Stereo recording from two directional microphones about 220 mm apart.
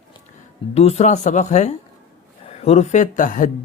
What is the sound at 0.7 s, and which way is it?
Speech, 30° left (ahead or behind).